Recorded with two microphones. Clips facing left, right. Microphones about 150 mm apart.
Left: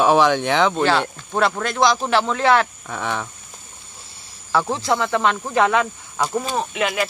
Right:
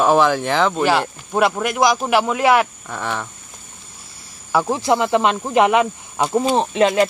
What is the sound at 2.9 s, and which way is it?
Speech, centre (ahead or behind).